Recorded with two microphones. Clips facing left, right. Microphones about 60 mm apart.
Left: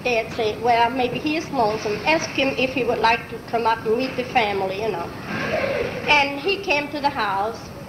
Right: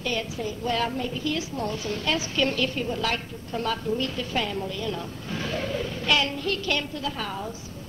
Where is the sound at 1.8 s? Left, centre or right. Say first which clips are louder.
Left 7 dB; left.